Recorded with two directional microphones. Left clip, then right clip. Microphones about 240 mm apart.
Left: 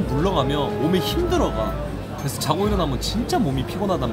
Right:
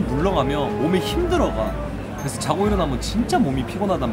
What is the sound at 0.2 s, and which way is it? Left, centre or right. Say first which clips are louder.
A man's voice: right 1 dB; centre.